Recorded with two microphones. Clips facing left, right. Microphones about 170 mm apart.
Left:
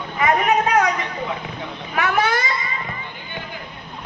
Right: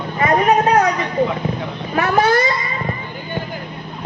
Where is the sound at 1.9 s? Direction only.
30° right (ahead or behind).